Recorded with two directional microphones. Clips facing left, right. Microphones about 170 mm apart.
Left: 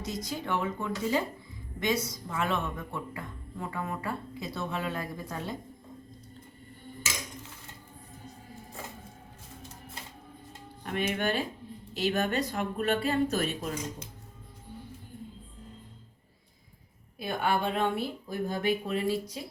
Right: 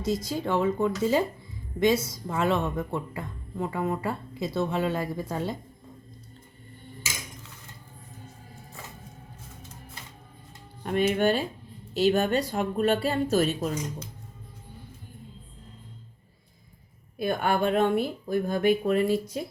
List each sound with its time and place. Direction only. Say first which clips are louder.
0.0 s speech: right 7 dB; 30° right (ahead or behind)
10.8 s speech: right 7 dB; 35° right (ahead or behind)
17.2 s speech: right 4 dB; 50° right (ahead or behind)